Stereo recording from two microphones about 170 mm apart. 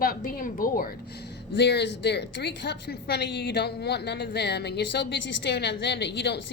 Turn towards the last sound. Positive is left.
turn(degrees=90)